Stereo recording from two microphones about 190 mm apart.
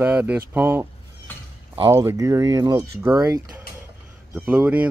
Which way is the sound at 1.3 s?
10° left (ahead or behind).